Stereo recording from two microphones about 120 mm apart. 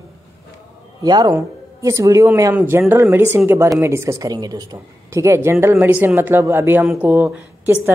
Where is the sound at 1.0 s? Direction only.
35° right (ahead or behind).